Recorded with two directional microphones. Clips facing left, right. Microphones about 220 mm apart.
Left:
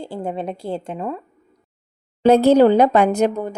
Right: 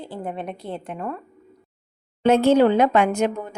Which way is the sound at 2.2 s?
35° left (ahead or behind).